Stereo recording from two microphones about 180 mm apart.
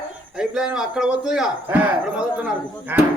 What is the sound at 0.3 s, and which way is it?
A man's voice, 5° right (ahead or behind).